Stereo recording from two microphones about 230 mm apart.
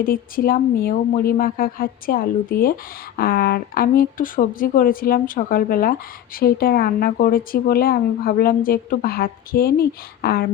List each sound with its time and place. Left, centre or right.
0.0 s speech: left